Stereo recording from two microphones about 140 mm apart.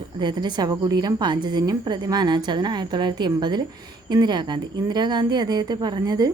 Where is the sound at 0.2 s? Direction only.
35° right (ahead or behind).